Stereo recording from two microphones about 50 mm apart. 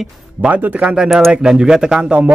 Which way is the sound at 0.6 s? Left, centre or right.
Right.